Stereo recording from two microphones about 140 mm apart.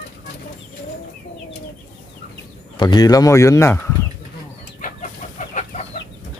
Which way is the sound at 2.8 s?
30° left (ahead or behind).